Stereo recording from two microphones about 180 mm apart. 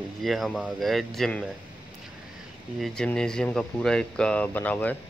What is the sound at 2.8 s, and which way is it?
Speech, 5° left (ahead or behind).